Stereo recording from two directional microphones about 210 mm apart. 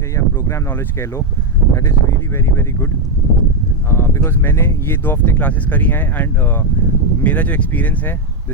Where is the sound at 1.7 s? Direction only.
15° left (ahead or behind).